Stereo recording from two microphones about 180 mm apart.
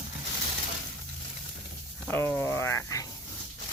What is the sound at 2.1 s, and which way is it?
Speech, 10° left (ahead or behind).